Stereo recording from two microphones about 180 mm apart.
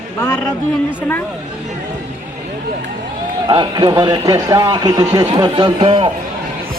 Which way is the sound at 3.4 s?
25° right (ahead or behind).